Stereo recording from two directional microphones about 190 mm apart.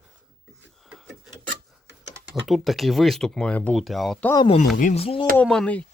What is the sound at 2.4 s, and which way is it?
Speech, centre (ahead or behind).